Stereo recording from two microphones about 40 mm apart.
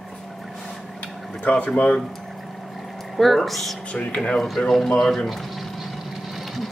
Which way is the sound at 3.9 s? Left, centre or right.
Left.